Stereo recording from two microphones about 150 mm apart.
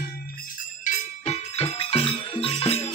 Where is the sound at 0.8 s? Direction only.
45° left (ahead or behind).